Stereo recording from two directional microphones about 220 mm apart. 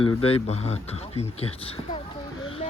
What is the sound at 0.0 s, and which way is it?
Speech, 25° left (ahead or behind).